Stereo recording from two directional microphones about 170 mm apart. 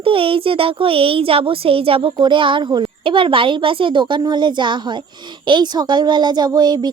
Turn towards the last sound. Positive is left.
turn(degrees=-25)  # may be behind; listen again after turning